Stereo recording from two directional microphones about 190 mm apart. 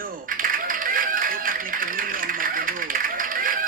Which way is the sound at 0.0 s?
45° right (ahead or behind).